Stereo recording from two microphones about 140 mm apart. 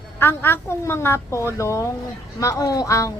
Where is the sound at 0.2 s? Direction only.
15° left (ahead or behind).